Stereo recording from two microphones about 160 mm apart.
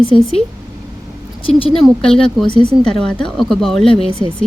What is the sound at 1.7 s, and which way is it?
Speech, 5° left (ahead or behind).